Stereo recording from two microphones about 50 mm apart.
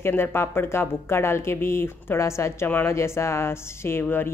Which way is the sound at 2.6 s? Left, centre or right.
Left.